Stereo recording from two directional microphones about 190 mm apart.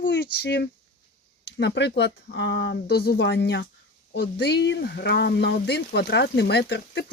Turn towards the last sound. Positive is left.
turn(degrees=60)  # may be behind; listen again after turning